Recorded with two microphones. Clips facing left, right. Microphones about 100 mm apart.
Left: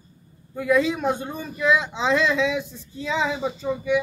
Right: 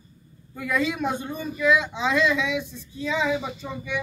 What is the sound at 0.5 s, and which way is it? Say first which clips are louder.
Speech: left 5 dB; 30° left (ahead or behind).